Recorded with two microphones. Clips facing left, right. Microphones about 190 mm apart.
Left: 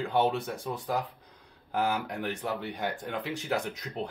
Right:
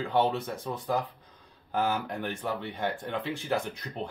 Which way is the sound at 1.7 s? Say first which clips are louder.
Even; 10° left (ahead or behind).